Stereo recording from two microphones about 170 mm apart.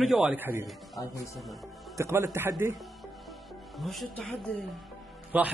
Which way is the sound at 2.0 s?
15° right (ahead or behind).